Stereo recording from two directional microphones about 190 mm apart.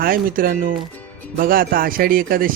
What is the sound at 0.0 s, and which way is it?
Speech, 50° right (ahead or behind).